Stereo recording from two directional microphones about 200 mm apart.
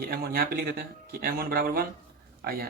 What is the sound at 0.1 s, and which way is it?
Speech, 50° right (ahead or behind).